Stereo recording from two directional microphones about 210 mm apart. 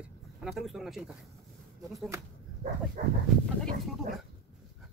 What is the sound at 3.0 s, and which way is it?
Dog, 35° right (ahead or behind).